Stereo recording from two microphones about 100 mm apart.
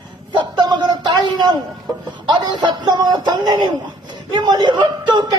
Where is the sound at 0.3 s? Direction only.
50° right (ahead or behind).